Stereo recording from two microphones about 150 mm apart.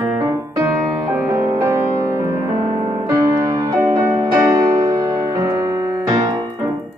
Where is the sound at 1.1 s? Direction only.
25° right (ahead or behind).